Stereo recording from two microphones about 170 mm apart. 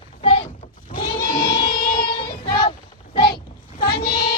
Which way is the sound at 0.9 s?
30° left (ahead or behind).